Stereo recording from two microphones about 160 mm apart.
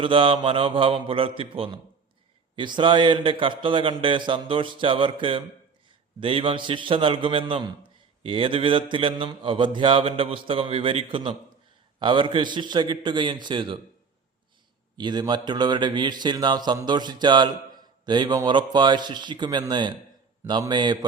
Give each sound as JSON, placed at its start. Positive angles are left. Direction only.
{"t": 0.0, "sound": "mantra", "side_deg": -35}
{"t": 11.9, "sound": "a man's voice", "side_deg": -30}
{"t": 14.9, "sound": "a man's voice", "side_deg": -25}